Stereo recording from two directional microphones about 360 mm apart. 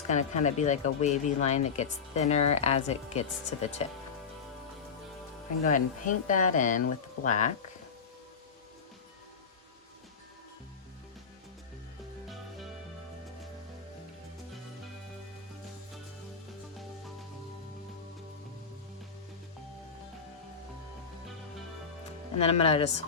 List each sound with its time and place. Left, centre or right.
0.1 s speech: centre
5.6 s speech: left
22.4 s speech: centre